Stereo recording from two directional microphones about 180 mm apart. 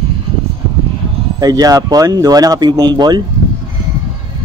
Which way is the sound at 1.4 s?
20° right (ahead or behind).